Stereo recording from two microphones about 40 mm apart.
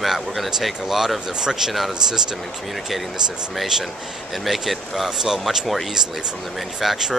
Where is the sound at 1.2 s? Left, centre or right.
Centre.